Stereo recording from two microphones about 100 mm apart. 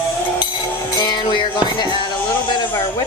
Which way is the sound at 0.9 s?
45° left (ahead or behind).